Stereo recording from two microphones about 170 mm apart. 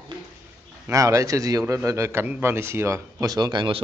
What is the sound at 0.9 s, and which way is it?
A man's voice, 20° right (ahead or behind).